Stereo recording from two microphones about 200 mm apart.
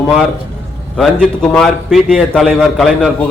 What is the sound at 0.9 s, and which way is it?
A man's voice, centre (ahead or behind).